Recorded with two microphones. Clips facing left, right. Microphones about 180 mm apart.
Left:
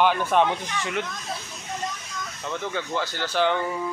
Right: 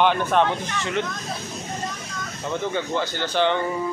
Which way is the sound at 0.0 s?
10° left (ahead or behind).